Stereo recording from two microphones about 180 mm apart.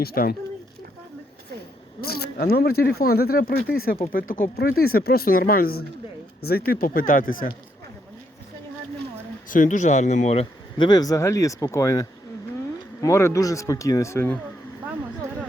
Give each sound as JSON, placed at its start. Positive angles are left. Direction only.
{"t": 0.0, "sound": "speech", "side_deg": 55}
{"t": 2.0, "sound": "speech", "side_deg": 60}
{"t": 9.5, "sound": "speech", "side_deg": 45}